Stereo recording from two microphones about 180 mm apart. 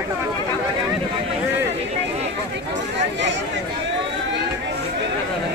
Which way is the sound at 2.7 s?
90° right.